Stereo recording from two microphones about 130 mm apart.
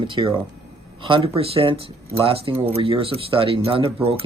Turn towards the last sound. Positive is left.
turn(degrees=-45)  # may be behind; listen again after turning